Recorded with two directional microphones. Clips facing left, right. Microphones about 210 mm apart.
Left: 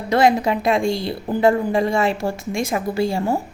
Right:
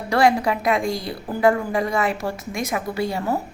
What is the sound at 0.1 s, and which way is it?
A woman's voice, 20° left (ahead or behind).